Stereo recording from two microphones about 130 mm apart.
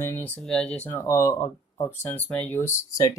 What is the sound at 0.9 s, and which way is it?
Speech, 25° left (ahead or behind).